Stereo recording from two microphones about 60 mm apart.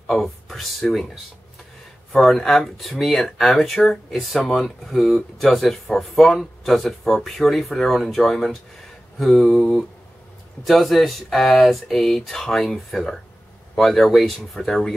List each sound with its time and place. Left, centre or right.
0.1 s speech: centre
2.1 s speech: centre